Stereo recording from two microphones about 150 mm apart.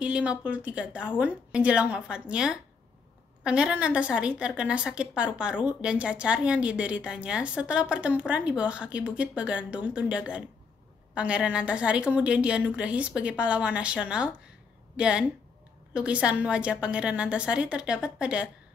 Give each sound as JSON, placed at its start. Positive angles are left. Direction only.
{"t": 0.0, "sound": "a woman's voice", "side_deg": -5}